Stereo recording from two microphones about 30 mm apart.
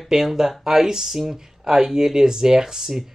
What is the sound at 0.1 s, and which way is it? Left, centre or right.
Speech, centre.